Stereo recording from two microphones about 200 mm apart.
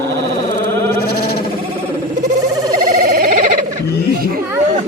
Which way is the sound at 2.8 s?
45° right (ahead or behind).